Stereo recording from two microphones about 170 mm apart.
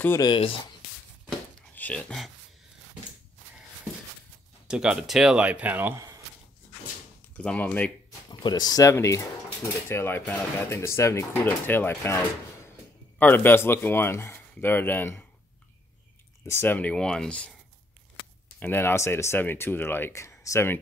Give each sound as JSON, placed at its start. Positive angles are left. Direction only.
{"t": 0.2, "sound": "speech", "side_deg": 25}
{"t": 1.8, "sound": "speech", "side_deg": 5}
{"t": 4.6, "sound": "speech", "side_deg": -5}
{"t": 7.3, "sound": "speech", "side_deg": 10}
{"t": 8.3, "sound": "speech", "side_deg": 25}
{"t": 16.4, "sound": "speech", "side_deg": 10}
{"t": 18.6, "sound": "speech", "side_deg": 15}